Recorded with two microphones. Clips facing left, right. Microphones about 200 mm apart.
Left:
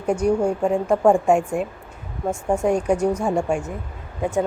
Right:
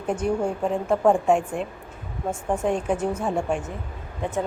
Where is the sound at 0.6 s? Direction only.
10° left (ahead or behind).